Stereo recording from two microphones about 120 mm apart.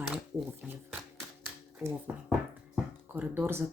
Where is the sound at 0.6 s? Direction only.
5° right (ahead or behind).